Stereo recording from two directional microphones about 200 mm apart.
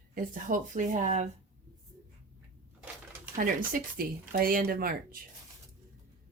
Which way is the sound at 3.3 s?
45° right (ahead or behind).